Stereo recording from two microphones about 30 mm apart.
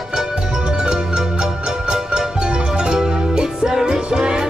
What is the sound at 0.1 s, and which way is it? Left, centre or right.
Music, right.